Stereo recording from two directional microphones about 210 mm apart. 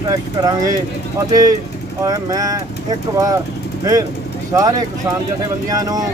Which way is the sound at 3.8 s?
15° right (ahead or behind).